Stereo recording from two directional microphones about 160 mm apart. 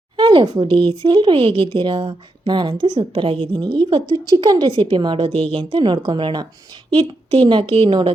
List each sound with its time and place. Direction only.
0.2 s speech: 30° right (ahead or behind)